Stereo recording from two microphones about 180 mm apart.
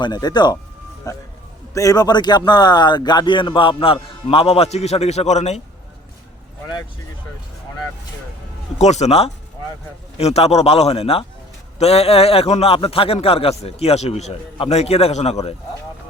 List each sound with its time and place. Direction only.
0.0 s a man's voice: 25° left (ahead or behind); by 5.6 s 40° left (ahead or behind)
8.8 s a man's voice: 40° left (ahead or behind)